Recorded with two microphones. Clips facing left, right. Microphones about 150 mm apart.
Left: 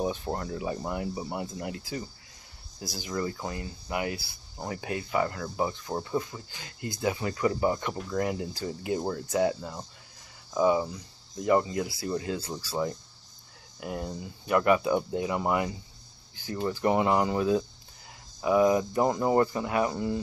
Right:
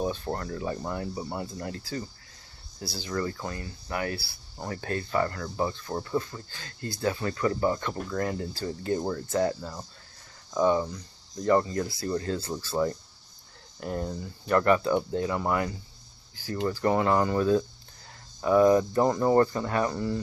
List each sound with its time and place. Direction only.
0.0 s speech: 15° left (ahead or behind)